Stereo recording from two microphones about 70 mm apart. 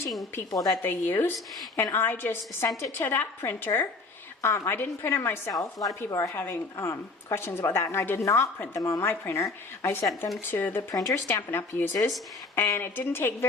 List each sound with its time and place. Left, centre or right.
0.5 s a woman's voice: left
0.8 s a woman's voice: left
5.5 s a woman's voice: left
6.1 s a woman's voice: left
6.3 s a woman's voice: left
8.5 s a woman's voice: left